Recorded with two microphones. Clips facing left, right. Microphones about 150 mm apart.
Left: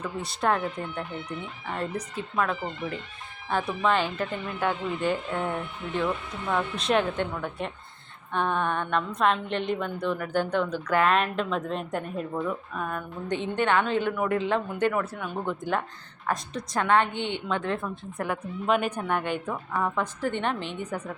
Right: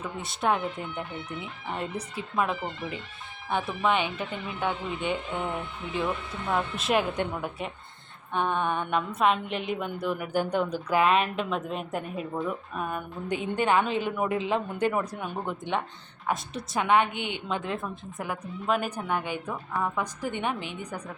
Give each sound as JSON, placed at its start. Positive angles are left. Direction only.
{"t": 0.0, "sound": "a woman's voice", "side_deg": 0}
{"t": 7.1, "sound": "a woman's voice", "side_deg": -15}
{"t": 8.3, "sound": "a woman's voice", "side_deg": -5}